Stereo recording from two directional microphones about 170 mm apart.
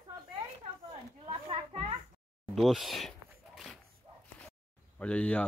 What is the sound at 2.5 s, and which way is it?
Speech, centre (ahead or behind).